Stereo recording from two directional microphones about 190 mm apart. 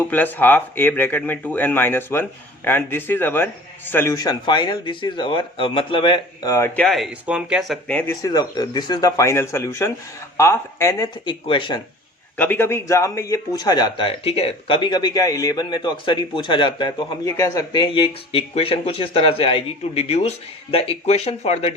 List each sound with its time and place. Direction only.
0.0 s speech: 10° left (ahead or behind)
6.7 s speech: centre (ahead or behind)
7.9 s speech: 5° left (ahead or behind)
8.2 s speech: 20° left (ahead or behind)
12.4 s speech: 10° left (ahead or behind); by 21.7 s 35° left (ahead or behind)